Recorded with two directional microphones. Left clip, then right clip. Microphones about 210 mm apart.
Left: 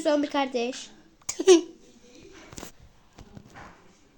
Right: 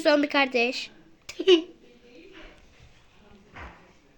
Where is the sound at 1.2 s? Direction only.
55° left (ahead or behind).